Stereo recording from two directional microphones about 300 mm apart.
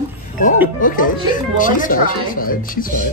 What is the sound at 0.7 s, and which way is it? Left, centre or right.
Speech, left.